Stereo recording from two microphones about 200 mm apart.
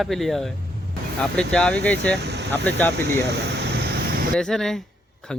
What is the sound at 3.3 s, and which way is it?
Vehicle, 55° right (ahead or behind).